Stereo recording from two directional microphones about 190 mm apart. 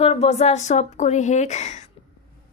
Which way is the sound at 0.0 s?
30° left (ahead or behind).